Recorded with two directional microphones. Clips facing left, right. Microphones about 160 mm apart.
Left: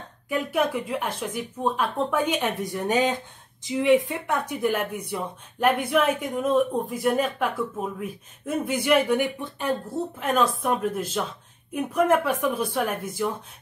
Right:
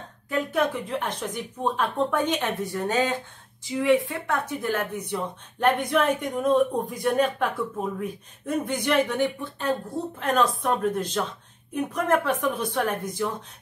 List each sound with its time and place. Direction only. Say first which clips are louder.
0.3 s a woman's voice: even; 10° left (ahead or behind)